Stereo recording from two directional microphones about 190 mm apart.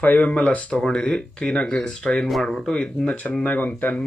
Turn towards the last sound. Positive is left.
turn(degrees=10)  # may be behind; listen again after turning